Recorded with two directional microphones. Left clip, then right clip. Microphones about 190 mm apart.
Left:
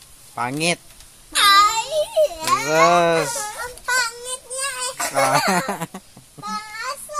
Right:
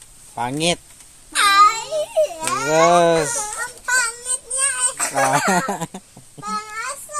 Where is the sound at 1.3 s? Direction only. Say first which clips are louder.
Right 1 dB; 15° left (ahead or behind).